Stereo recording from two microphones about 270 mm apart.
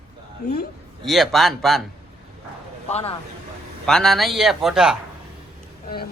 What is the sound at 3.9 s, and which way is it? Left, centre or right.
Speech, centre.